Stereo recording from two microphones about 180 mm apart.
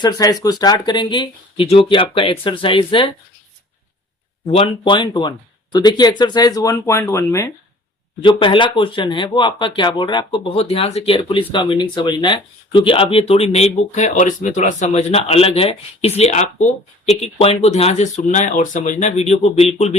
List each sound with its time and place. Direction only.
0.0 s speech: 20° left (ahead or behind)
4.5 s speech: 30° left (ahead or behind); by 7.5 s 15° left (ahead or behind)
8.2 s speech: 25° left (ahead or behind)